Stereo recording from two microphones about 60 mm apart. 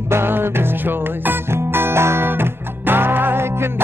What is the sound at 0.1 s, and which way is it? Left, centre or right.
Music, right.